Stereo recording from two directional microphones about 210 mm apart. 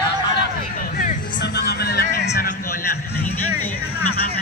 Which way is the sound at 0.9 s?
45° left (ahead or behind).